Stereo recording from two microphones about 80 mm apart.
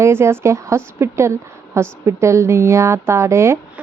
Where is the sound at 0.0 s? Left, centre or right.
Right.